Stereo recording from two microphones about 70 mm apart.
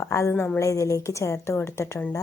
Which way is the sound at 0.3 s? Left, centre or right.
Left.